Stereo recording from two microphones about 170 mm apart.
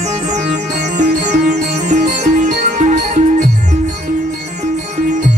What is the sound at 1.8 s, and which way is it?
Music, 45° right (ahead or behind).